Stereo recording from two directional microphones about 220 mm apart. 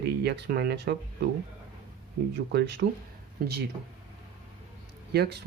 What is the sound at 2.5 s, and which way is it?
Speech, 50° right (ahead or behind).